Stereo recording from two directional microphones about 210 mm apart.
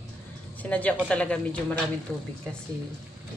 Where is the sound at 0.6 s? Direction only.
5° left (ahead or behind).